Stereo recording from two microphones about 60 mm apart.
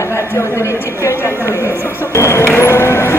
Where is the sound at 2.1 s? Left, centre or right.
Left.